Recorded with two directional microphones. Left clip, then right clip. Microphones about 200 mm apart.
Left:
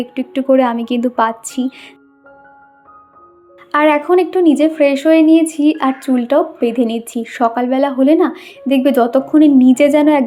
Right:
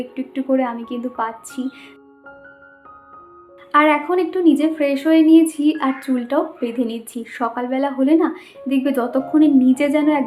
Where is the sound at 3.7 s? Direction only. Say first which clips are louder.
Left 3 dB; 30° left (ahead or behind).